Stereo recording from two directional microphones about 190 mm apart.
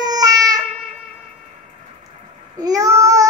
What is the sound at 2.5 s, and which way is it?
Child singing, 20° right (ahead or behind).